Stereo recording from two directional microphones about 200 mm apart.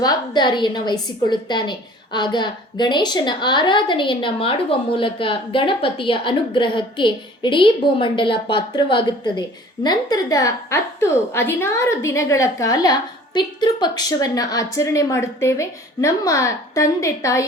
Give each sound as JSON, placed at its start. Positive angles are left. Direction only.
{"t": 0.0, "sound": "a woman's voice", "side_deg": 20}